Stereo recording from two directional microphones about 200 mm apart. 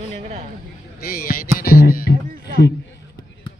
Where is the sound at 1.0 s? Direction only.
50° left (ahead or behind).